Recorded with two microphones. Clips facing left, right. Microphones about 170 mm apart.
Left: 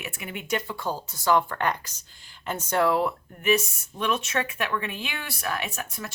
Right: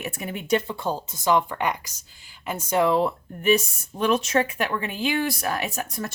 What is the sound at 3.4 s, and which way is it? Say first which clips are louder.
Speech: right 3 dB; 35° right (ahead or behind).